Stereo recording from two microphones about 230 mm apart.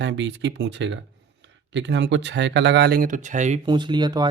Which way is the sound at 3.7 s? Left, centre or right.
Centre.